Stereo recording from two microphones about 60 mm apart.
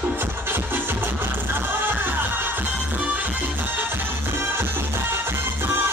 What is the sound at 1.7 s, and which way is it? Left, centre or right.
Music, right.